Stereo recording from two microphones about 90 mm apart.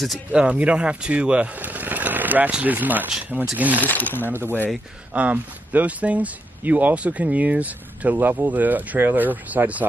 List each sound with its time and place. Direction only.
0.3 s speech: 15° right (ahead or behind)
3.8 s speech: 20° left (ahead or behind)
4.3 s speech: 25° right (ahead or behind)